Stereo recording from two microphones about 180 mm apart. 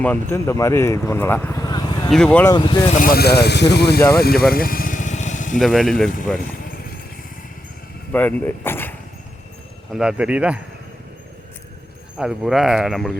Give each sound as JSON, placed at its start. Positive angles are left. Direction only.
{"t": 0.0, "sound": "speech", "side_deg": 10}
{"t": 2.0, "sound": "speech", "side_deg": 5}
{"t": 2.5, "sound": "speech", "side_deg": 25}
{"t": 2.9, "sound": "speech", "side_deg": 50}
{"t": 4.5, "sound": "vehicle", "side_deg": 55}
{"t": 5.5, "sound": "speech", "side_deg": 0}
{"t": 8.1, "sound": "speech", "side_deg": 10}
{"t": 9.9, "sound": "speech", "side_deg": -5}
{"t": 12.1, "sound": "speech", "side_deg": -5}